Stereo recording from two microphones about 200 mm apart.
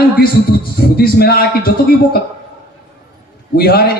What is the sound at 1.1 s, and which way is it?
Speech, 50° left (ahead or behind).